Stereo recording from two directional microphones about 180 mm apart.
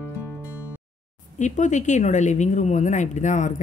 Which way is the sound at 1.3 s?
45° left (ahead or behind).